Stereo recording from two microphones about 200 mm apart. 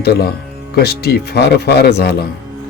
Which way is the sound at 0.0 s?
50° left (ahead or behind).